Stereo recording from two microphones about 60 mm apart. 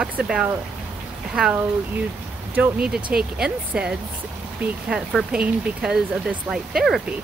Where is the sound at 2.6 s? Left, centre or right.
Centre.